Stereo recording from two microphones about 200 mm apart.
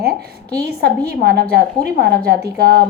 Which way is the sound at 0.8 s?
50° right (ahead or behind).